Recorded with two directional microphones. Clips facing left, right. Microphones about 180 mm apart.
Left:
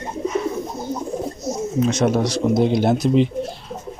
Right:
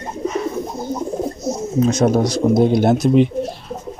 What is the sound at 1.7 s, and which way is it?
Speech, 35° right (ahead or behind).